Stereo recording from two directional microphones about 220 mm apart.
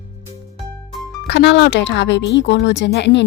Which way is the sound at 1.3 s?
50° left (ahead or behind).